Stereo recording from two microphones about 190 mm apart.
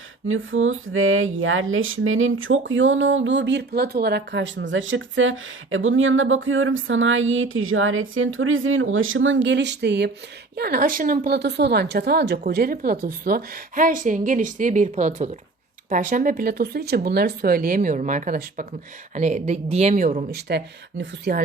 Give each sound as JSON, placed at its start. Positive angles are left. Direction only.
{"t": 0.3, "sound": "a woman's voice", "side_deg": -90}
{"t": 21.0, "sound": "a woman's voice", "side_deg": -55}